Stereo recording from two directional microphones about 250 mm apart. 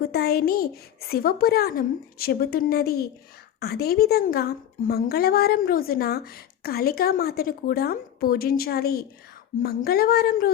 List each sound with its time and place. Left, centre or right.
0.0 s speech: left